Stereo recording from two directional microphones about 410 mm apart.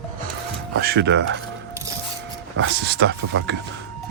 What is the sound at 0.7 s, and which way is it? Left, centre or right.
Speech, right.